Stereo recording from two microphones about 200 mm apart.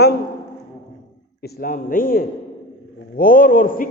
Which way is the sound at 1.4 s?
45° left (ahead or behind).